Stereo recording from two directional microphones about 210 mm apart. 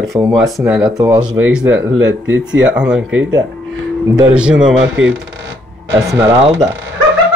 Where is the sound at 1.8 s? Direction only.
65° right (ahead or behind).